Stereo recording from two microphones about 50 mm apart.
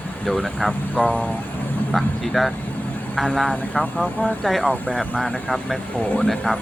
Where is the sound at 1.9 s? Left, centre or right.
Centre.